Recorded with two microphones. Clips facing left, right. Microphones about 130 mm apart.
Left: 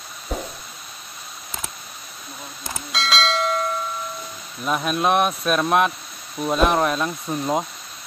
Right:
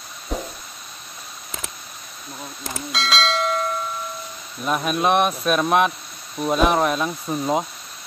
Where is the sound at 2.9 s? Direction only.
Centre (ahead or behind).